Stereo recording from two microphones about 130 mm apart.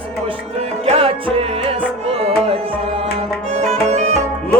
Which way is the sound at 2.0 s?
50° right (ahead or behind).